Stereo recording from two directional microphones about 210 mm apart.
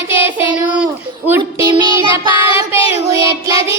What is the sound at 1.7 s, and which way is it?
Child singing, 20° right (ahead or behind).